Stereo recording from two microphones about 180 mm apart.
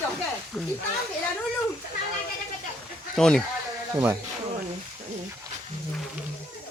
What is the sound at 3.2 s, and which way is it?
Speech, 5° left (ahead or behind).